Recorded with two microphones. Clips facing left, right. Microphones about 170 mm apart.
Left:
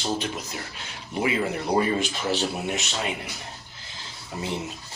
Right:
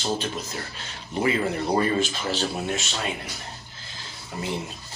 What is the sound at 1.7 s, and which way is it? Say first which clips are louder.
Speech: left 1 dB; 15° left (ahead or behind).